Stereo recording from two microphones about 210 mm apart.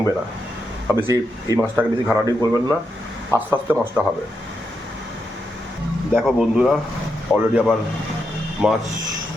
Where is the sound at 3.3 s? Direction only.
10° right (ahead or behind).